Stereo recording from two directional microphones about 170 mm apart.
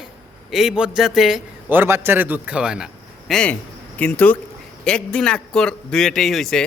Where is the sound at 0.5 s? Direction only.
5° right (ahead or behind).